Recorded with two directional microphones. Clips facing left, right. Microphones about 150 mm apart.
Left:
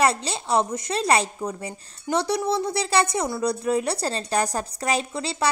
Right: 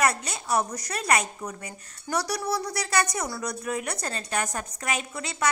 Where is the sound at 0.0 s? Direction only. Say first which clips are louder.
Left 4 dB; 30° left (ahead or behind).